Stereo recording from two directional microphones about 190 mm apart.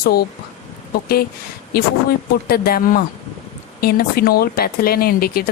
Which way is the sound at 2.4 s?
55° left (ahead or behind).